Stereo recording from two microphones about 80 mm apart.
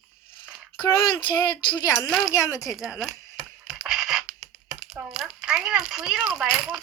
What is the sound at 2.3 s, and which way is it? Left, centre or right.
Speech, left.